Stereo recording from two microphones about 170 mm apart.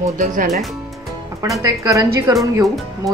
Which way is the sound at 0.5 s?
Centre (ahead or behind).